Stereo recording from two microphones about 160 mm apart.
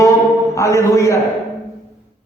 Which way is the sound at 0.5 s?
20° left (ahead or behind).